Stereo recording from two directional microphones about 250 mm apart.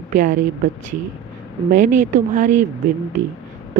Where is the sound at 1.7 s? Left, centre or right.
Right.